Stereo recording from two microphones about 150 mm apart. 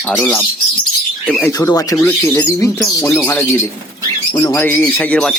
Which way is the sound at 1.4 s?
25° left (ahead or behind).